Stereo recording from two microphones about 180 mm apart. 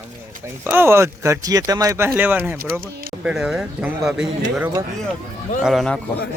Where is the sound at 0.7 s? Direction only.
15° right (ahead or behind).